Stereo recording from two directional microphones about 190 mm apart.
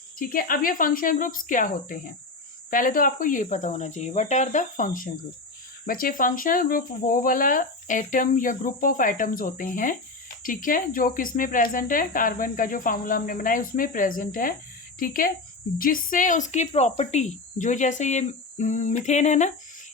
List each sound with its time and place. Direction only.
0.2 s speech: 50° left (ahead or behind)